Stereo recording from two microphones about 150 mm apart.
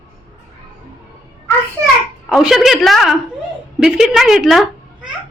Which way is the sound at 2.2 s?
Centre (ahead or behind).